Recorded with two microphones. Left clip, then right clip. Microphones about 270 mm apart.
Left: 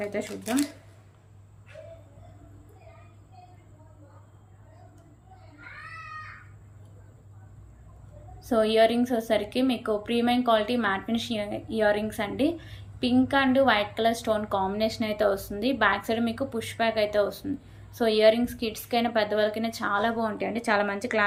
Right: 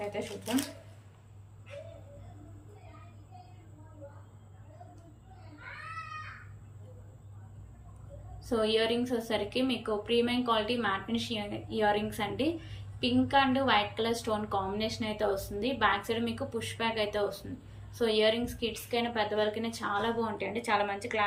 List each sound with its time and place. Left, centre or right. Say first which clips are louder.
0.0 s a woman's voice: left 5 dB; centre
8.4 s a woman's voice: left 7 dB; centre